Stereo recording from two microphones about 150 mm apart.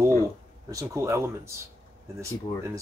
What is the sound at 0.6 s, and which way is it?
Speech, 20° right (ahead or behind).